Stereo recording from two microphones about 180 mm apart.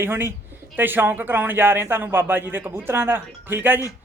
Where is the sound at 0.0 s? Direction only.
10° right (ahead or behind).